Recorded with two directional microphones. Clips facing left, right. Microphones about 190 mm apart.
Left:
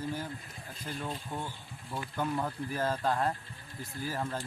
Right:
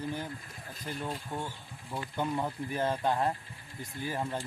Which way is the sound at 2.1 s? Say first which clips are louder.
Right 1 dB; 15° right (ahead or behind).